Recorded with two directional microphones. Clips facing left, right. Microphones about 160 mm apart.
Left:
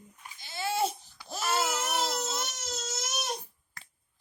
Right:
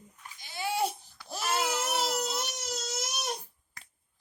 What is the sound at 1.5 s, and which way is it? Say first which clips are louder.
Baby cry: even; 10° right (ahead or behind).